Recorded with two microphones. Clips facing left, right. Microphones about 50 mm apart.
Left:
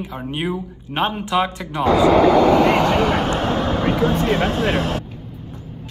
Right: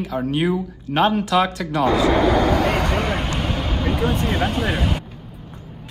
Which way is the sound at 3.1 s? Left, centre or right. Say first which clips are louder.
Left 5 dB; left.